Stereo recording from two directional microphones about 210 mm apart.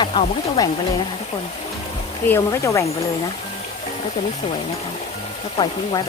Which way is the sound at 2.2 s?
15° left (ahead or behind).